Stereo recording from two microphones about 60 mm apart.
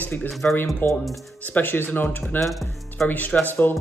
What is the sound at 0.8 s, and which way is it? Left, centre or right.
Speech, left.